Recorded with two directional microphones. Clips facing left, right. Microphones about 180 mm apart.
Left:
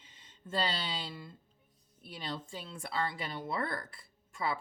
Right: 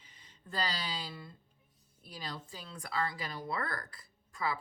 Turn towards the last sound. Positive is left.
turn(degrees=25)  # may be behind; listen again after turning